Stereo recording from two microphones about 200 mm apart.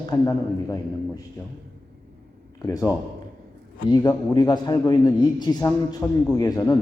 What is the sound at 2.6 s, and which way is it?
A man's voice, 15° left (ahead or behind).